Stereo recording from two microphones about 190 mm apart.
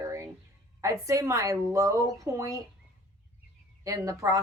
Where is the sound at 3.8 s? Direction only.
15° right (ahead or behind).